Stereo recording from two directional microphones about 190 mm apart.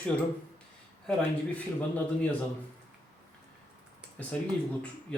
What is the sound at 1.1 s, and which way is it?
Speech, 5° left (ahead or behind).